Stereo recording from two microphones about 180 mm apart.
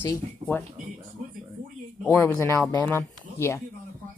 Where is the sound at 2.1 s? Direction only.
15° left (ahead or behind).